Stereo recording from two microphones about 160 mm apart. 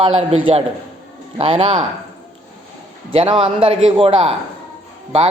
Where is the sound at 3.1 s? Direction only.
30° right (ahead or behind).